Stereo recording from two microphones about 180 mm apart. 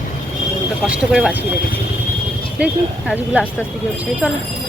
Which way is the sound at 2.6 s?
5° right (ahead or behind).